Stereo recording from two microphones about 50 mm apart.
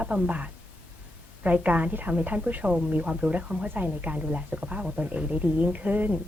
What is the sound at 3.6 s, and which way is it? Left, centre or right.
A woman's voice, right.